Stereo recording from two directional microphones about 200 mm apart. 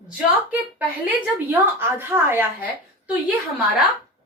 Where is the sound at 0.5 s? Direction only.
10° right (ahead or behind).